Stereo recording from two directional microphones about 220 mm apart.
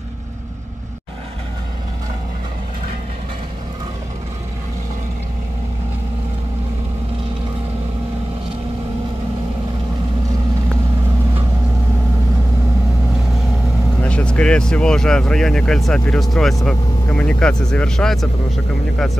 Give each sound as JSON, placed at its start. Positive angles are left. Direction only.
{"t": 14.0, "sound": "speech", "side_deg": 5}